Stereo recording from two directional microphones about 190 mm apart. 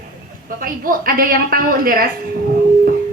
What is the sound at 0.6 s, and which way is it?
A woman's voice, 50° right (ahead or behind).